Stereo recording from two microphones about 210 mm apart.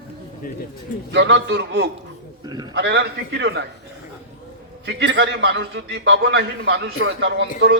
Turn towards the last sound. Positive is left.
turn(degrees=-55)  # may be behind; listen again after turning